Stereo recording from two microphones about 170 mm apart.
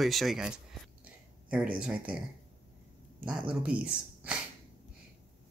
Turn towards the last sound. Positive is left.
turn(degrees=-5)  # may be behind; listen again after turning